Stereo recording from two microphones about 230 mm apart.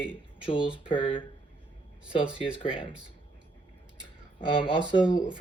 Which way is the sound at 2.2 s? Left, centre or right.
Centre.